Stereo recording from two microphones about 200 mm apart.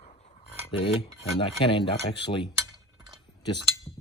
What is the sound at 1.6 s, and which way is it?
Speech, 25° left (ahead or behind).